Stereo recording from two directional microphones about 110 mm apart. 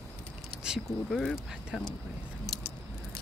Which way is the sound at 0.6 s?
5° right (ahead or behind).